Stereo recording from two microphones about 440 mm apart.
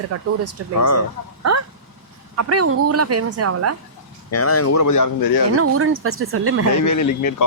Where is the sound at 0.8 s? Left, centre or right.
Left.